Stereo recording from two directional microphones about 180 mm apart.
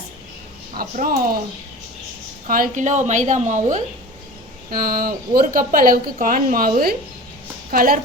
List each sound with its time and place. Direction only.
0.7 s speech: 50° right (ahead or behind)
2.5 s speech: 45° right (ahead or behind)
4.7 s speech: 55° right (ahead or behind)